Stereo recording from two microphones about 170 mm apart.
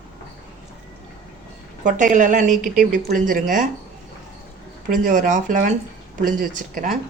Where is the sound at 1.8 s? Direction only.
50° right (ahead or behind).